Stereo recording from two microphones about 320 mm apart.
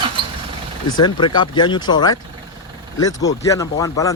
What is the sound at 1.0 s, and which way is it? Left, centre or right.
Speech, centre.